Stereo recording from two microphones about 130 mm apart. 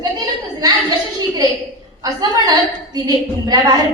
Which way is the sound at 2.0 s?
30° right (ahead or behind).